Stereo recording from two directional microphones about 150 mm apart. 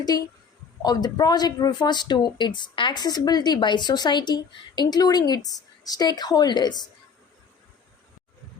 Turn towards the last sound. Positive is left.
turn(degrees=30)  # may be behind; listen again after turning